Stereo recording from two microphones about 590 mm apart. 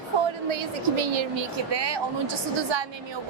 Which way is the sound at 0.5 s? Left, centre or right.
Right.